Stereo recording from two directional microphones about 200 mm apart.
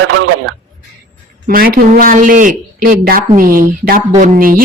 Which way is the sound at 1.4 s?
45° right (ahead or behind).